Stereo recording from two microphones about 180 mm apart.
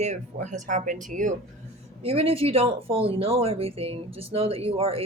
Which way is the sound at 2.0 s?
35° right (ahead or behind).